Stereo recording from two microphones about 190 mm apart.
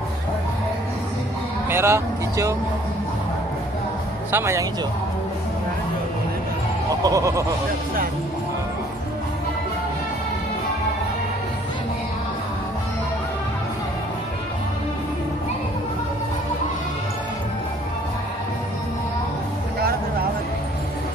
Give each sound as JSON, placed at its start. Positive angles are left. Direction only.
{"t": 1.7, "sound": "speech", "side_deg": -15}
{"t": 4.3, "sound": "speech", "side_deg": -15}
{"t": 7.0, "sound": "speech", "side_deg": -20}